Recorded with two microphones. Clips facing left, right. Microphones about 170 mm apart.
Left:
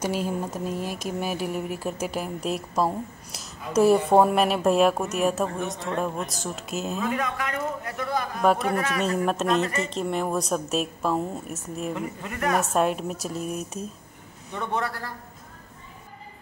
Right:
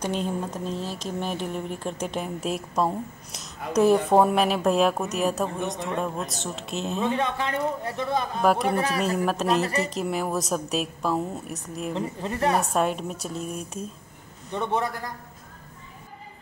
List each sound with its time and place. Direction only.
0.0 s speech: 5° left (ahead or behind)
7.0 s a woman's voice: 25° right (ahead or behind)
9.1 s speech: centre (ahead or behind)
9.6 s speech: 35° right (ahead or behind)
9.9 s speech: 5° right (ahead or behind)
11.9 s a woman's voice: 30° right (ahead or behind)
12.5 s speech: centre (ahead or behind)
14.5 s a woman's voice: 20° right (ahead or behind)